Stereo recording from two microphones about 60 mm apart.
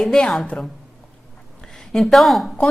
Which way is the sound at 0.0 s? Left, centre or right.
Centre.